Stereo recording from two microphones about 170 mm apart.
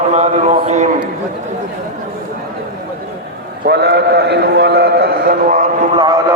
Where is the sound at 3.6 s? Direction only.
75° right (ahead or behind); by 5.6 s 55° right (ahead or behind).